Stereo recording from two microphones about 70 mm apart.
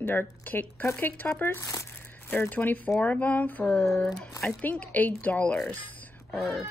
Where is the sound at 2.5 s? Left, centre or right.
Left.